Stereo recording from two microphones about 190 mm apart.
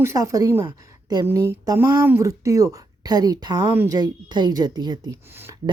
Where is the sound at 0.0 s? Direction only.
15° right (ahead or behind).